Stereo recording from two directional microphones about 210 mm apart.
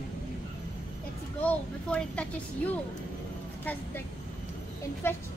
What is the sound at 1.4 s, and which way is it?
Speech, 5° left (ahead or behind).